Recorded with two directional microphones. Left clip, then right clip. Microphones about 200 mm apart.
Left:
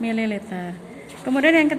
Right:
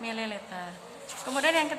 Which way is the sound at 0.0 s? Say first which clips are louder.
Left 8 dB; 15° left (ahead or behind).